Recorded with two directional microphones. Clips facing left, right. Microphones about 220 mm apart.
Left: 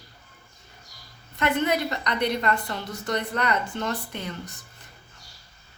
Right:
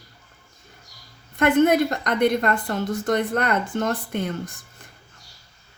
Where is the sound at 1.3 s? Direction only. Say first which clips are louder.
Right 7 dB; 50° right (ahead or behind).